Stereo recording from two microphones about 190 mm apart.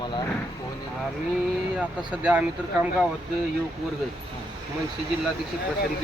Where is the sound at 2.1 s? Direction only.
5° right (ahead or behind).